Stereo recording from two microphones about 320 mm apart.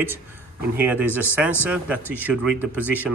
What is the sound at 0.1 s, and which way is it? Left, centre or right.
A man's voice, centre.